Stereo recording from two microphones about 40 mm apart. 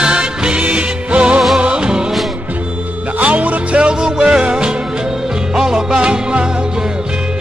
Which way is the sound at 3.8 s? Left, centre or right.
Right.